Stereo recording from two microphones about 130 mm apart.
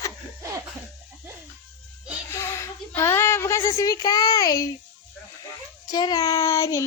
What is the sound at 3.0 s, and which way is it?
Speech, 20° left (ahead or behind).